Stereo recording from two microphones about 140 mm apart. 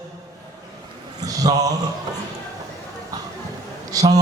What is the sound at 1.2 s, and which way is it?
Speech, 25° right (ahead or behind).